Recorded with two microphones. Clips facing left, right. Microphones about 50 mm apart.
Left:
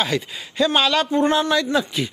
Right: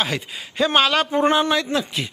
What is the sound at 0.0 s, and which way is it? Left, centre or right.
Speech, centre.